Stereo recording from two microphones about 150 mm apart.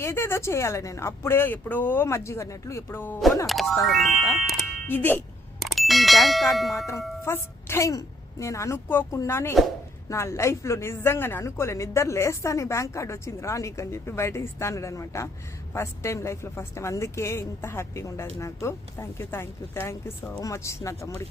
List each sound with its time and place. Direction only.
0.0 s speech: 15° left (ahead or behind)
3.4 s speech: centre (ahead or behind)
4.9 s speech: 10° left (ahead or behind)
5.5 s speech: centre (ahead or behind)
7.3 s a woman's voice: 15° left (ahead or behind)